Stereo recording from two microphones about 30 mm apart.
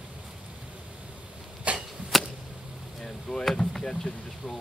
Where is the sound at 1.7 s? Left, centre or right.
Right.